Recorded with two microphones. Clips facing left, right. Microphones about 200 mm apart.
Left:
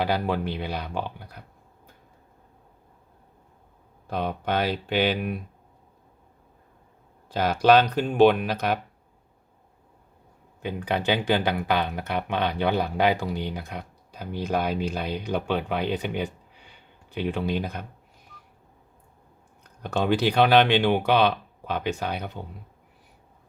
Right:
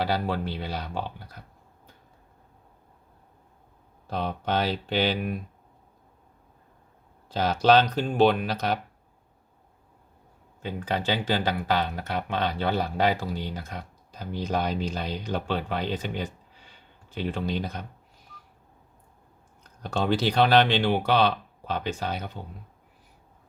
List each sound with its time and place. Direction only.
0.0 s speech: 15° left (ahead or behind)
4.0 s speech: 10° left (ahead or behind)
7.3 s speech: 10° left (ahead or behind)
10.6 s speech: 15° left (ahead or behind)
20.2 s speech: 15° left (ahead or behind)